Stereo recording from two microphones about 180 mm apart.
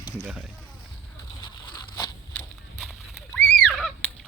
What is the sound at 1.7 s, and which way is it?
Zipper, 20° left (ahead or behind).